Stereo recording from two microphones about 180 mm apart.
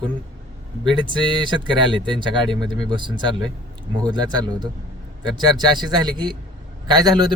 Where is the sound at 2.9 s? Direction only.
25° right (ahead or behind).